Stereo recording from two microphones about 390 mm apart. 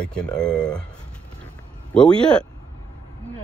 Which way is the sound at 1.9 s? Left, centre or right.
Centre.